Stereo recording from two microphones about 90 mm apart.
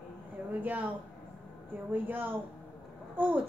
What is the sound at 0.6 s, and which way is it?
Speech, 20° right (ahead or behind).